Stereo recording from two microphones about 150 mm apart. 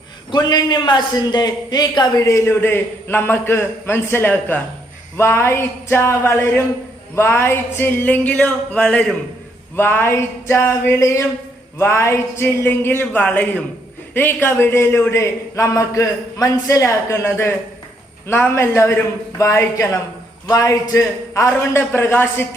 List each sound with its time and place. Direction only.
0.3 s a man's voice: 30° left (ahead or behind)